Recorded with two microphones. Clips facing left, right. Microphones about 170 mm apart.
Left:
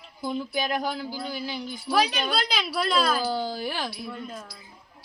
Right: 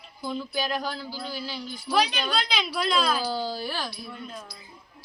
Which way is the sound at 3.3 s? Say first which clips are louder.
Left 1 dB; 15° left (ahead or behind).